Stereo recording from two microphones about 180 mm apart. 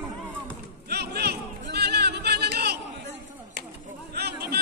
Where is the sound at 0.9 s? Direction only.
65° right (ahead or behind).